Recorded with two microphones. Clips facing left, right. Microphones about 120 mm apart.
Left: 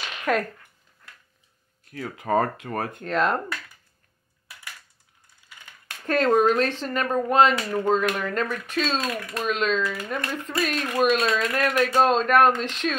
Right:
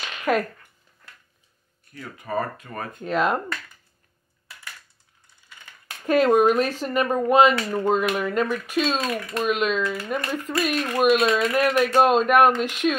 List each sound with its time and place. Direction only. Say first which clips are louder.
0.2 s speech: right 2 dB; 5° right (ahead or behind)
1.9 s speech: left 6 dB; 90° left; by 3.0 s 65° left (ahead or behind)
3.0 s speech: right 2 dB; 5° right (ahead or behind)
6.0 s speech: right 2 dB; 10° right (ahead or behind)